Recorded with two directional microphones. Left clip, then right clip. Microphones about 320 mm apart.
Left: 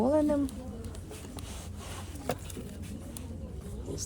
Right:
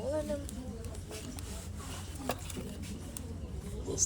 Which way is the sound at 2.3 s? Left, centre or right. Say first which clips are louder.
Left 3 dB; centre.